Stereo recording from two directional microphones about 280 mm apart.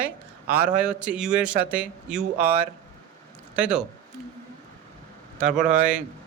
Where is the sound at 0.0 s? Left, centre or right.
Centre.